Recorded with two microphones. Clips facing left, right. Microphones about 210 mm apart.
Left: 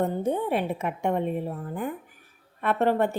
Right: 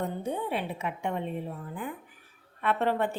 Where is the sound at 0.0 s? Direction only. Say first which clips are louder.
Left 6 dB; 45° left (ahead or behind).